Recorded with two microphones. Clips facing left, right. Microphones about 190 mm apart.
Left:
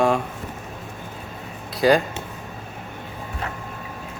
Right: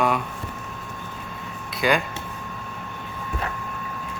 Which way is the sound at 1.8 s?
35° left (ahead or behind).